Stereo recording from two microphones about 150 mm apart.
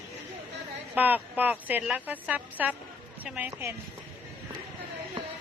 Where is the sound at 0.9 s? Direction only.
10° right (ahead or behind).